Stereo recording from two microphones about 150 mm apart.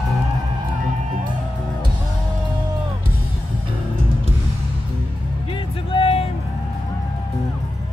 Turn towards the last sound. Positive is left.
turn(degrees=40)  # may be behind; listen again after turning